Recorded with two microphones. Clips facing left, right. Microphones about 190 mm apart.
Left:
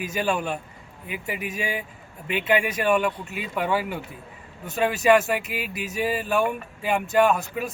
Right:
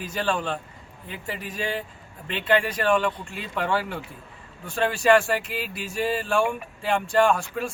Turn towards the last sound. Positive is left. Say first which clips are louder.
# even
turn(degrees=5)  # may be behind; listen again after turning